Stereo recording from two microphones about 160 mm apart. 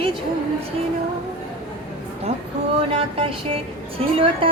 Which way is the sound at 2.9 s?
35° right (ahead or behind).